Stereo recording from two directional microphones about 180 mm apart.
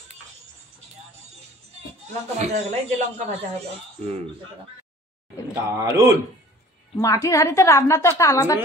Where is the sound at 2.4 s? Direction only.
40° right (ahead or behind).